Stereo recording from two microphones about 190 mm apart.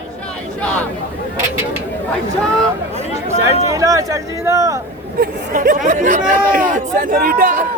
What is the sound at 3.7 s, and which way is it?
Speech, 15° right (ahead or behind).